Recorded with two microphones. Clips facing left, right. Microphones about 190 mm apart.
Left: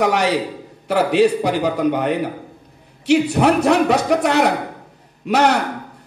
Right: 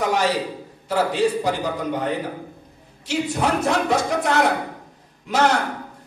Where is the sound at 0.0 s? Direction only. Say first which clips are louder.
Left 4 dB; 65° left (ahead or behind).